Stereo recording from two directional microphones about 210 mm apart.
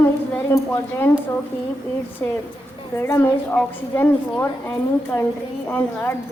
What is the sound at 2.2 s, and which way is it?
A woman's voice, 10° left (ahead or behind).